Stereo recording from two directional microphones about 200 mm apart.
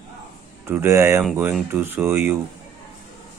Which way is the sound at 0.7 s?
15° right (ahead or behind).